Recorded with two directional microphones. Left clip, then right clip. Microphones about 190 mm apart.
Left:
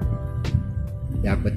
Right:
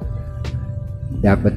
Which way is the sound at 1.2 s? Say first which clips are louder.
Right 10 dB; 20° right (ahead or behind).